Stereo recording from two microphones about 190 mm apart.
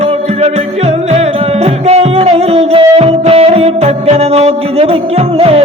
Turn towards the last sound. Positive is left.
turn(degrees=-35)  # may be behind; listen again after turning